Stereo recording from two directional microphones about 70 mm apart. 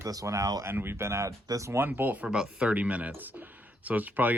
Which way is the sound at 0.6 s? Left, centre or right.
Right.